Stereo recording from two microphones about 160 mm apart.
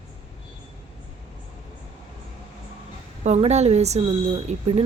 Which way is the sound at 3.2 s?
45° right (ahead or behind).